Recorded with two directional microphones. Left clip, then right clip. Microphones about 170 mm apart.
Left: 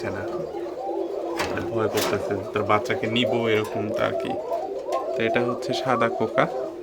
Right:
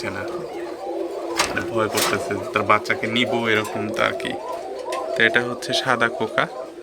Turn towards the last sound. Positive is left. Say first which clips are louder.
# right 1 dB
turn(degrees=10)  # may be behind; listen again after turning